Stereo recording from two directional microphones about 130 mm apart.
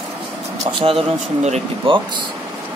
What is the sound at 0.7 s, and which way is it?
Speech, 45° right (ahead or behind).